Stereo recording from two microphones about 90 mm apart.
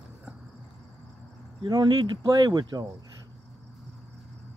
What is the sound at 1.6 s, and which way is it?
Speech, 55° right (ahead or behind).